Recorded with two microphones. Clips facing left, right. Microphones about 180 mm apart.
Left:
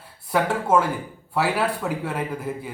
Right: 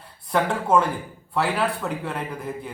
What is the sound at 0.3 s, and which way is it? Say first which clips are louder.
A man's voice: even; 5° left (ahead or behind).